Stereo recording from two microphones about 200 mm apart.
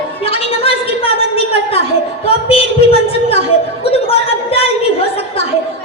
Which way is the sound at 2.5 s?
30° left (ahead or behind).